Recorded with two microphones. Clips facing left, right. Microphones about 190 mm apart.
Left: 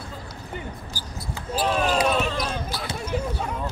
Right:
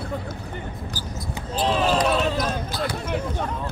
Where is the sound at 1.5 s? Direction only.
10° left (ahead or behind).